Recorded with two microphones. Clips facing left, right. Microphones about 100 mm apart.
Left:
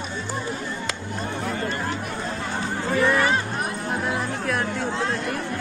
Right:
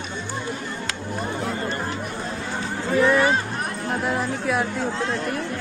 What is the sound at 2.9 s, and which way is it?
Speech, centre (ahead or behind).